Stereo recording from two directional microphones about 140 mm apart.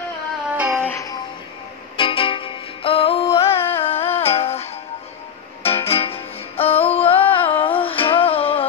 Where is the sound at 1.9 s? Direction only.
40° left (ahead or behind).